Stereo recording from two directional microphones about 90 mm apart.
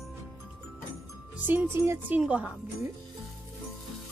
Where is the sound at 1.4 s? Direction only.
20° right (ahead or behind).